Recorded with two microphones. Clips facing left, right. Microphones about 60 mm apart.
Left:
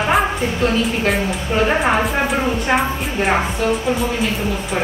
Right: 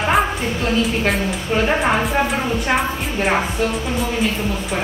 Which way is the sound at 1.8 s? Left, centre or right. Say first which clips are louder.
Left 1 dB; centre.